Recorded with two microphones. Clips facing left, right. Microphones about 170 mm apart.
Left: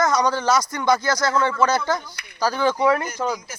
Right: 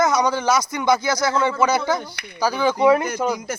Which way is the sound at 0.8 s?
20° right (ahead or behind).